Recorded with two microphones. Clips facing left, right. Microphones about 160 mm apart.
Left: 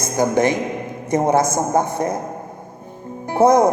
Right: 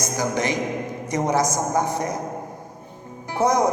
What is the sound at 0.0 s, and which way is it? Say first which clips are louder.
Speech: left 7 dB; 55° left (ahead or behind).